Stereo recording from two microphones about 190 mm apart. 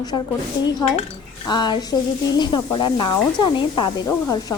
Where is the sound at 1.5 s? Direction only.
25° left (ahead or behind).